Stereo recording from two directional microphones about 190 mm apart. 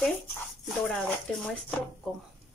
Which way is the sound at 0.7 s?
5° left (ahead or behind).